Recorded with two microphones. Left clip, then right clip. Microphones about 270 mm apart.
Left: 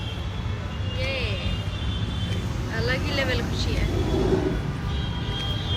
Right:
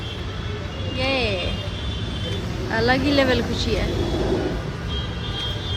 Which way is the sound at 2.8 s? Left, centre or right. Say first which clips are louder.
Right 7 dB; centre.